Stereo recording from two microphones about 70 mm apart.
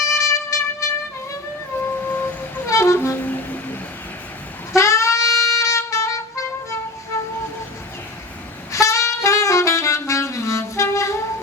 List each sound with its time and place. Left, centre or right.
0.1 s music: left
1.7 s music: left
2.6 s music: left
3.2 s vehicle: left
4.7 s saxophone: left
8.7 s saxophone: left